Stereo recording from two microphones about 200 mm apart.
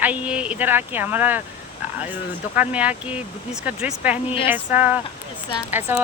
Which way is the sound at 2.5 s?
5° right (ahead or behind).